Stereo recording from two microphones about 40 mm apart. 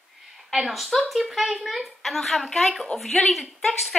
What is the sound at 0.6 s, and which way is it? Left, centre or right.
Speech, centre.